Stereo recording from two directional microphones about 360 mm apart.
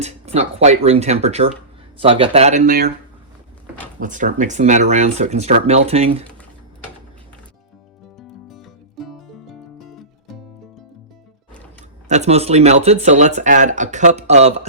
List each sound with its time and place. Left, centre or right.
0.0 s speech: centre
4.0 s speech: right
8.4 s music: centre
12.0 s speech: centre